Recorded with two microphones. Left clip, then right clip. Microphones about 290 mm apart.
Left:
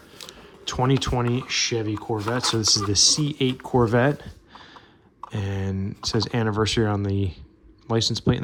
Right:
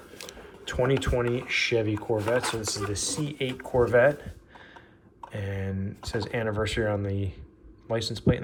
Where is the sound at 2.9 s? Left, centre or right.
Centre.